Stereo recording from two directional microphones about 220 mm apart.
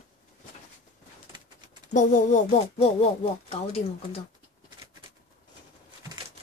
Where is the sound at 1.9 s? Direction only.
35° left (ahead or behind).